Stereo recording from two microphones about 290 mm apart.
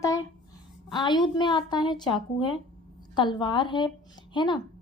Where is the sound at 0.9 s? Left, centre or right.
Centre.